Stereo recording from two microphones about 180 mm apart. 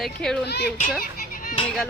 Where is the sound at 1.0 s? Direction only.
50° left (ahead or behind).